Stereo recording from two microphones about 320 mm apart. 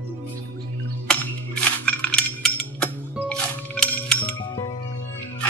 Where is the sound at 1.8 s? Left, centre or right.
Centre.